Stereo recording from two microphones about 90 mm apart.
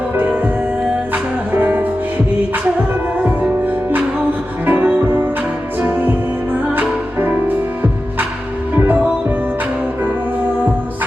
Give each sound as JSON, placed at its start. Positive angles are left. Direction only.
{"t": 1.1, "sound": "music", "side_deg": -20}
{"t": 3.2, "sound": "music", "side_deg": -20}
{"t": 8.7, "sound": "music", "side_deg": -20}